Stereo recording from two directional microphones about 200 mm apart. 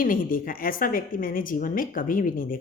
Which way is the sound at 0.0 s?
45° left (ahead or behind).